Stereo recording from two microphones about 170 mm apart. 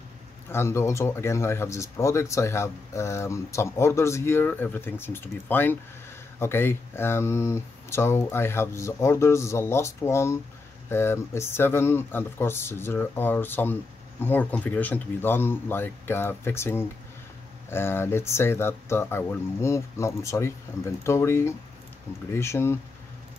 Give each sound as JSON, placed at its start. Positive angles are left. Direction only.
{"t": 0.5, "sound": "speech", "side_deg": 15}